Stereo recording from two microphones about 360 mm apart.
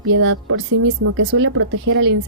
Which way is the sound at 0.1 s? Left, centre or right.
Right.